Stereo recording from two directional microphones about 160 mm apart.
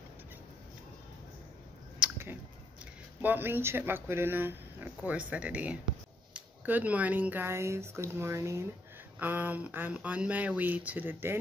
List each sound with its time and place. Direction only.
2.0 s chewing: 15° right (ahead or behind)
3.2 s speech: 10° right (ahead or behind)